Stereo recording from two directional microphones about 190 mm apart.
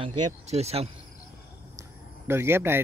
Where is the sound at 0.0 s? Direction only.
35° right (ahead or behind).